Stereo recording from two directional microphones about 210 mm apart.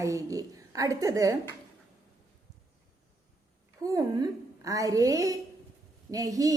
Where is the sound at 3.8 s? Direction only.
15° right (ahead or behind).